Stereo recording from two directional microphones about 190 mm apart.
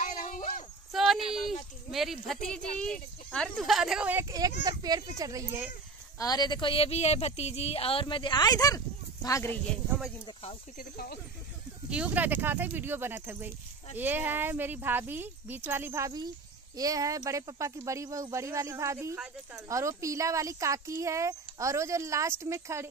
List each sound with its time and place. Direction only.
0.0 s a sound: 40° left (ahead or behind)
0.9 s speech: centre (ahead or behind); by 5.7 s 20° right (ahead or behind)
6.1 s speech: 20° left (ahead or behind)
10.2 s speech: 30° left (ahead or behind)
10.8 s speech: 50° left (ahead or behind)
11.9 s speech: 5° right (ahead or behind)
19.7 s speech: 15° right (ahead or behind)